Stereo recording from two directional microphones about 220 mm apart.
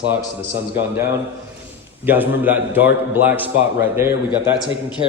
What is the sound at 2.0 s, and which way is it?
A man's voice, 10° right (ahead or behind).